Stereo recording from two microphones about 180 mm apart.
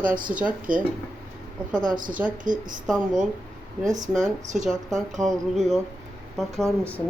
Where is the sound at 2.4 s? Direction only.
45° right (ahead or behind).